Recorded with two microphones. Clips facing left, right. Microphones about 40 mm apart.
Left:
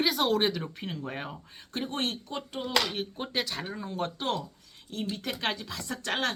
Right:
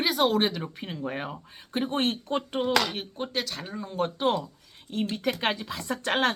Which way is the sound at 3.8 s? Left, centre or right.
Centre.